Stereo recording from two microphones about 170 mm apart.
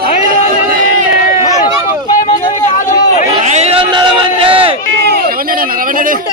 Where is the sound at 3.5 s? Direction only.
40° right (ahead or behind).